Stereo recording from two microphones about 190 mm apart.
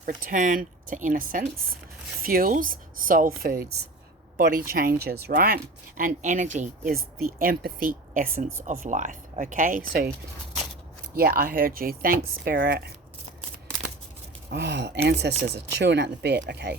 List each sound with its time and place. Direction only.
0.0 s speech: 45° right (ahead or behind)
11.1 s speech: 50° right (ahead or behind)
14.5 s speech: 65° right (ahead or behind)